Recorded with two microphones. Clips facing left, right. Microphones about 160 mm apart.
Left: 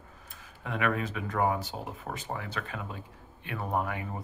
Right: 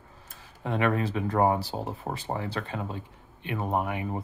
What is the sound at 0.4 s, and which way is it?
Speech, 30° right (ahead or behind).